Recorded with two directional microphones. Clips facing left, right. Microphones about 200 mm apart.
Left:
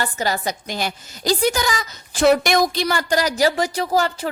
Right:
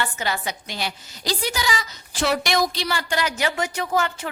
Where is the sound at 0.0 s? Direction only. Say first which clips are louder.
Left 4 dB; 40° left (ahead or behind).